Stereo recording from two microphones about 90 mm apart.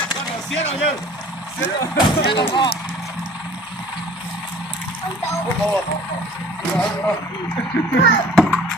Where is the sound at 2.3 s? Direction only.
60° left (ahead or behind).